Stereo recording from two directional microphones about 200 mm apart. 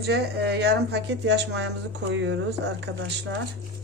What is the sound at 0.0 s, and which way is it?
Speech, 55° right (ahead or behind).